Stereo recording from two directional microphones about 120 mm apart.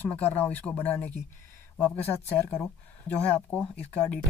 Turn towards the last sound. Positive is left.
turn(degrees=15)  # may be behind; listen again after turning